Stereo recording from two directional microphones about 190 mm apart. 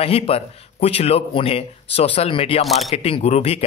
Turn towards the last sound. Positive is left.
turn(degrees=35)  # may be behind; listen again after turning